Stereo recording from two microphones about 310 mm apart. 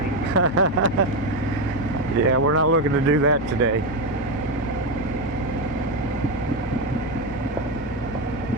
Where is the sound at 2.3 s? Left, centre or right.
Right.